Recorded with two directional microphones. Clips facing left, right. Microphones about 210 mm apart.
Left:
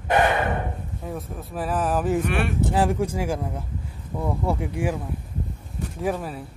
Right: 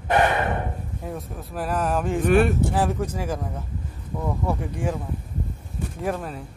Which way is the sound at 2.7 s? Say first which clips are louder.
Left 2 dB; 10° left (ahead or behind).